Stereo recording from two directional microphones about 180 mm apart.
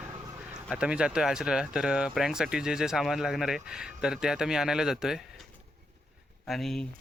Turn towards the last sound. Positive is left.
turn(degrees=0)  # may be behind; listen again after turning